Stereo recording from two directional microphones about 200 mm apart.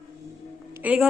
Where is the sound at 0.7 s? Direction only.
10° right (ahead or behind).